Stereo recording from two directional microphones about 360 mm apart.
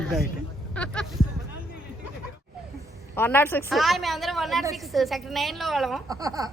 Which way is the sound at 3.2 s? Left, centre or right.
Centre.